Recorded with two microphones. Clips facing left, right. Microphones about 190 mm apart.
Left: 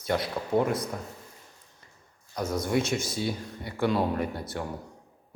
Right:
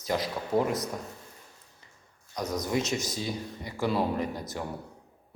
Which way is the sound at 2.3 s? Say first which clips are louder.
Left 2 dB; 5° left (ahead or behind).